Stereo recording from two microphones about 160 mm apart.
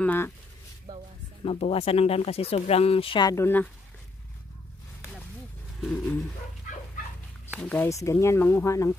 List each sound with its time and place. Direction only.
0.0 s speech: 10° left (ahead or behind)
0.9 s a sound: 25° right (ahead or behind)
1.4 s speech: 35° left (ahead or behind); by 3.6 s 15° left (ahead or behind)
5.9 s speech: 10° left (ahead or behind)
7.6 s speech: 10° left (ahead or behind)